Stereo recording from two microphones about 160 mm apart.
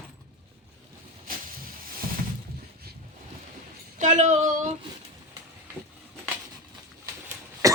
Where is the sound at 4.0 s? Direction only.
50° right (ahead or behind).